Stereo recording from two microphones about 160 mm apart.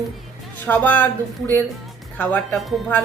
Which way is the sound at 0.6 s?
10° left (ahead or behind).